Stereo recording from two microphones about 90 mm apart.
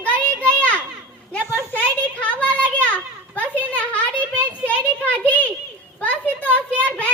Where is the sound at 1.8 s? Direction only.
15° left (ahead or behind).